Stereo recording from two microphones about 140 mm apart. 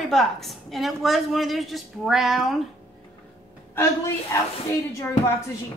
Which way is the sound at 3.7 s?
20° left (ahead or behind).